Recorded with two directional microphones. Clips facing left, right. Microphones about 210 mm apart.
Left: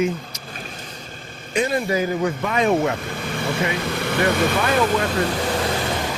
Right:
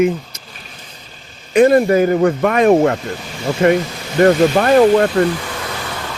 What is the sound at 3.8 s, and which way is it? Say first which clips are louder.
Vehicle: left 5 dB; 60° left (ahead or behind).